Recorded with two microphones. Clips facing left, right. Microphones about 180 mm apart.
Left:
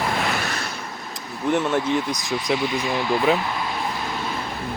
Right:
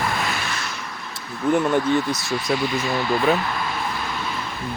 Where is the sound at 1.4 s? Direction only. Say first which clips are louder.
Right 2 dB; centre (ahead or behind).